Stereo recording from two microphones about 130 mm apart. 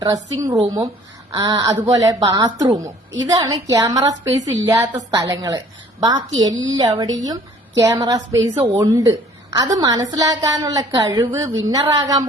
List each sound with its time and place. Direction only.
0.0 s a woman's voice: 30° right (ahead or behind)
4.7 s a woman's voice: 15° right (ahead or behind)
5.1 s a woman's voice: 30° right (ahead or behind)